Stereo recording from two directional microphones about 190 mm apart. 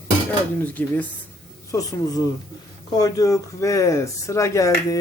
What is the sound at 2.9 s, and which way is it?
Speech, 20° left (ahead or behind).